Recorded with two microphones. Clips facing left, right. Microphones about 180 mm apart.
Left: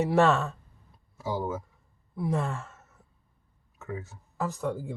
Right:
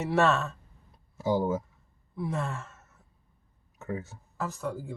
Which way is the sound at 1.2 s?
25° right (ahead or behind).